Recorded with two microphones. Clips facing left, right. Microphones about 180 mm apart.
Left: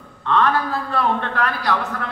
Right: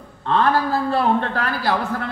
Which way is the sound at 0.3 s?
35° right (ahead or behind).